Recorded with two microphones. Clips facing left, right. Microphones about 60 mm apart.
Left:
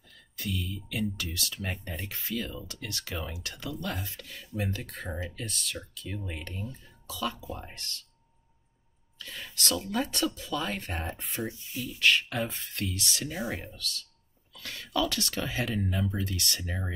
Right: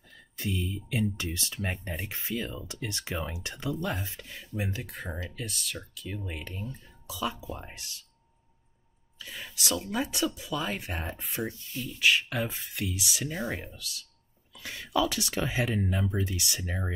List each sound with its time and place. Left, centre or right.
0.1 s speech: right
1.7 s speech: centre
2.0 s speech: right
9.2 s speech: centre
11.5 s speech: centre
12.0 s speech: centre